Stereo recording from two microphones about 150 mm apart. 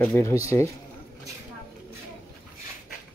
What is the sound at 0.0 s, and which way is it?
Speech, 20° left (ahead or behind).